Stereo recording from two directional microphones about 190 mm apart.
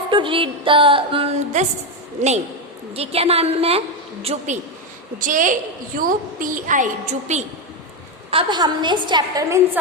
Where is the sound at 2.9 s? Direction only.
30° right (ahead or behind).